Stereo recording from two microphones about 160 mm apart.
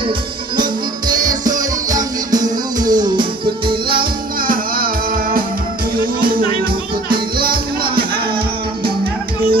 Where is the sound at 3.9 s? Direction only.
65° right (ahead or behind).